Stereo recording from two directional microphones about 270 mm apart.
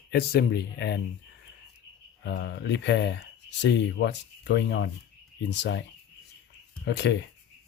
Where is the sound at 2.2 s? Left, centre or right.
Left.